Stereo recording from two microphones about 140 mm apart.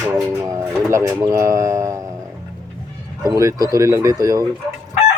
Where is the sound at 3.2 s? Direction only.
25° right (ahead or behind).